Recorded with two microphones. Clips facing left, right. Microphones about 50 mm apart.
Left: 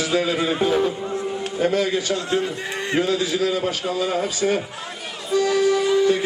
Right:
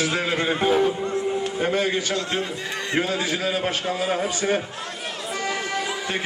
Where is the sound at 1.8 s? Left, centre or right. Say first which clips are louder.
Left 2 dB; right.